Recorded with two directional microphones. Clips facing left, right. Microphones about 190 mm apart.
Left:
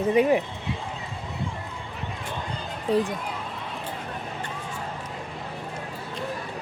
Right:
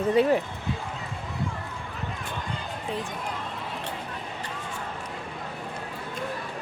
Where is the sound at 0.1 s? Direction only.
15° left (ahead or behind).